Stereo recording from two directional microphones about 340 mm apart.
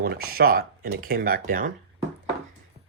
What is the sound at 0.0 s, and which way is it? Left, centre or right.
Speech, right.